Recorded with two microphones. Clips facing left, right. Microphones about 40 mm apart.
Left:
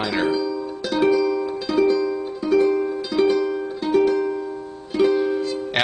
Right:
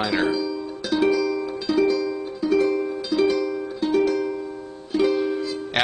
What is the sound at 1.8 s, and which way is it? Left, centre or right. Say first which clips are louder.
Music: left 2 dB; centre.